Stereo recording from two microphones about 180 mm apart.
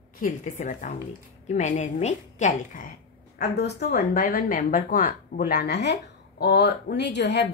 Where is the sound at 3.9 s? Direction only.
55° left (ahead or behind).